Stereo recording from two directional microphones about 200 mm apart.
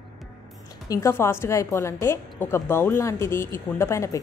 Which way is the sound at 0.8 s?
15° left (ahead or behind).